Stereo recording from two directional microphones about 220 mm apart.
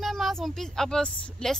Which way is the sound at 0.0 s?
Centre (ahead or behind).